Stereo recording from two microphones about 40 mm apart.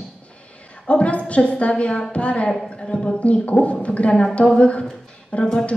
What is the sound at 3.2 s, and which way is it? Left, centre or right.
A woman's voice, left.